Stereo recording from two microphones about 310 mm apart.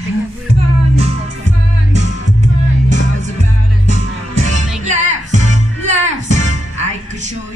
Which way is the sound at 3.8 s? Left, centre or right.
Right.